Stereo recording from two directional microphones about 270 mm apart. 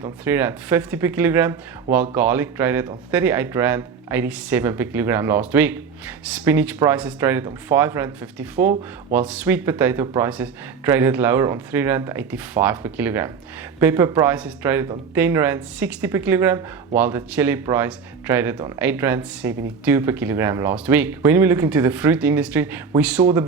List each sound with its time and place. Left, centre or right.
0.3 s speech: centre
8.6 s speech: right
9.1 s speech: centre